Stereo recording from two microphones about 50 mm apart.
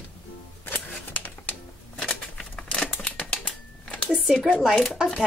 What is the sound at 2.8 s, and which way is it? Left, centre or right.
Typewriter, left.